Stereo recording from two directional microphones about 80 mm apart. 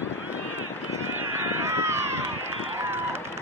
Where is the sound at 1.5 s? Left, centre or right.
Right.